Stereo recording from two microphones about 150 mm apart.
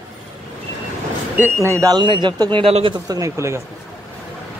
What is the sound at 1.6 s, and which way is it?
Speech, 20° right (ahead or behind).